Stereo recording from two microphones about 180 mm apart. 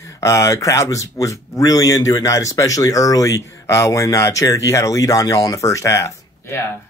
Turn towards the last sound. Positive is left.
turn(degrees=15)  # may be behind; listen again after turning